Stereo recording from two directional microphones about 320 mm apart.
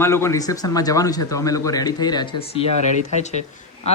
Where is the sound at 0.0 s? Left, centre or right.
Centre.